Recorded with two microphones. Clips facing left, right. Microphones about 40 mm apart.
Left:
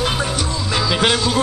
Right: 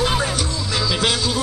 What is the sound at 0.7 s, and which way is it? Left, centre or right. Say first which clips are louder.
Music: left 3 dB; left.